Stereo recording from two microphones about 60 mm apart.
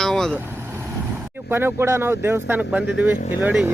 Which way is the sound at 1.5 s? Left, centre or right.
Right.